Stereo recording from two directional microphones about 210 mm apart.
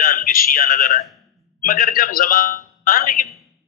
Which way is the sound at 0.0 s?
45° left (ahead or behind).